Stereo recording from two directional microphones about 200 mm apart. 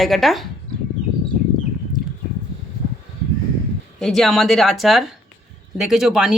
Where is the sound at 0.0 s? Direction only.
Centre (ahead or behind).